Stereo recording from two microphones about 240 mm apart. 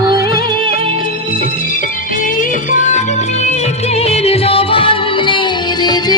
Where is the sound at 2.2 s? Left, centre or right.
Left.